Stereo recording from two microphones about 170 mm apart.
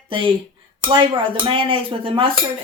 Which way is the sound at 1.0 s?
30° right (ahead or behind).